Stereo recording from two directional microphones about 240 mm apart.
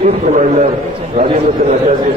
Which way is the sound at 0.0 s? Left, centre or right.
Right.